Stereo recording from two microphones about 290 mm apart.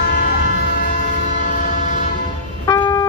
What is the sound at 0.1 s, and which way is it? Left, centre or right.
Train, left.